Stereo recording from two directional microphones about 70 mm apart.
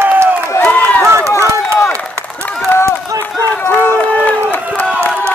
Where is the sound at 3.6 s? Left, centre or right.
Left.